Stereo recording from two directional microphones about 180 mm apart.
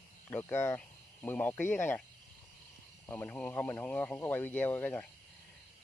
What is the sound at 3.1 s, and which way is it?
Speech, 10° left (ahead or behind).